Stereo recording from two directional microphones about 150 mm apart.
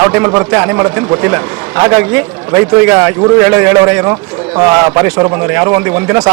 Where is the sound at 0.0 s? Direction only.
20° right (ahead or behind).